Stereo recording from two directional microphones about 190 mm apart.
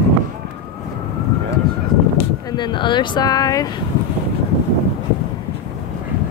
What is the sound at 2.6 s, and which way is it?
Speech, 25° left (ahead or behind).